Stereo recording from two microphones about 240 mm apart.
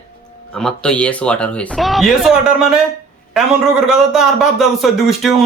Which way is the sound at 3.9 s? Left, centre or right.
Centre.